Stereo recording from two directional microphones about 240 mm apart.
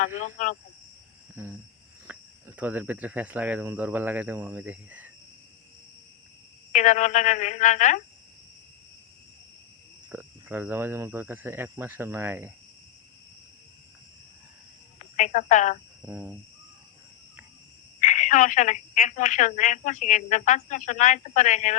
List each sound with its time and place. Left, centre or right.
0.0 s a woman's voice: left
1.4 s speech: centre
6.7 s a woman's voice: left
10.1 s speech: centre
15.1 s a woman's voice: left
16.0 s speech: centre
18.0 s a woman's voice: left